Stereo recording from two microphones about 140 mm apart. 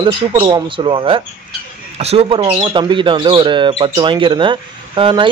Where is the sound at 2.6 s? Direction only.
35° right (ahead or behind).